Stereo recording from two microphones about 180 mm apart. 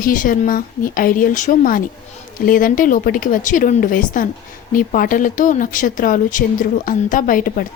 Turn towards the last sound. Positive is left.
turn(degrees=50)  # may be behind; listen again after turning